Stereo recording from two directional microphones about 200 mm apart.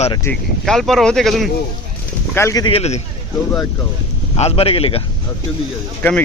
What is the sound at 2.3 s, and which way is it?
Speech, 15° left (ahead or behind).